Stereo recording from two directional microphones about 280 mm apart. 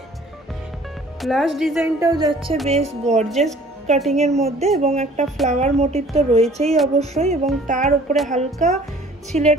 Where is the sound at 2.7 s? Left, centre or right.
Right.